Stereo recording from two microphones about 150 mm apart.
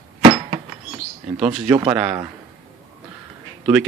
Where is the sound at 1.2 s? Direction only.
45° right (ahead or behind).